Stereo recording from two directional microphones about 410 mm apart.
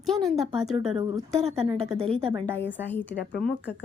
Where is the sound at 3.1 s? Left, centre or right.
Left.